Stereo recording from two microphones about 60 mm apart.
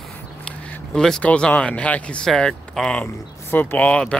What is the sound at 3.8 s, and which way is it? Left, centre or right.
Speech, centre.